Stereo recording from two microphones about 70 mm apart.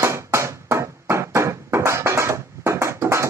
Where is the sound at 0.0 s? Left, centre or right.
Right.